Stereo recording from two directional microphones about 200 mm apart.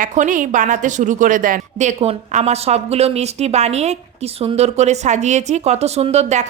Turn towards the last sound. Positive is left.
turn(degrees=-35)  # may be behind; listen again after turning